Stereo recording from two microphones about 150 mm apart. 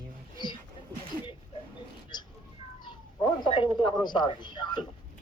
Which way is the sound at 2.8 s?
30° left (ahead or behind).